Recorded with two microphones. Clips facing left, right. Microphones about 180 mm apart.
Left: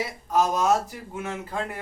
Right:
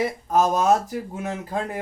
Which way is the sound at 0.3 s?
45° right (ahead or behind).